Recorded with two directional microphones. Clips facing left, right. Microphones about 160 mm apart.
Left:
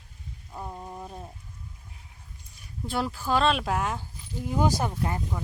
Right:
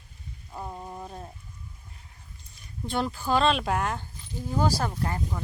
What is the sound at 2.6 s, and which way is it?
Speech, 5° left (ahead or behind).